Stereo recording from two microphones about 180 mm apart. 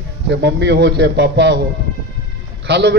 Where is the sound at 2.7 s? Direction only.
70° right (ahead or behind).